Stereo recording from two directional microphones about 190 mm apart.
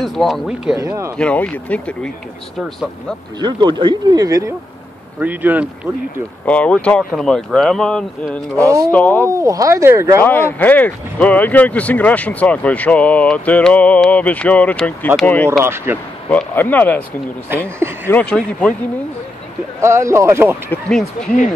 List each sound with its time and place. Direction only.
0.0 s speech: centre (ahead or behind)
0.7 s speech: 15° right (ahead or behind)
1.1 s speech: 5° left (ahead or behind)
3.3 s speech: 25° right (ahead or behind)
6.4 s speech: 5° left (ahead or behind)
9.2 s speech: 15° right (ahead or behind)
10.2 s speech: 10° left (ahead or behind)
15.6 s speech: 10° right (ahead or behind)
16.3 s speech: 10° left (ahead or behind)
18.0 s speech: 10° left (ahead or behind)
19.8 s speech: 15° right (ahead or behind)
20.7 s speech: 5° left (ahead or behind)